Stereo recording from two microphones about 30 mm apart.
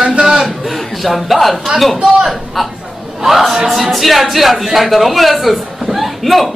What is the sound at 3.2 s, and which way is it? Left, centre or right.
Speech, centre.